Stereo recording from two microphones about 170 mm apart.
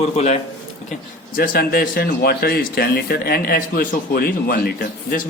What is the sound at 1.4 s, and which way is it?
Speech, 60° left (ahead or behind).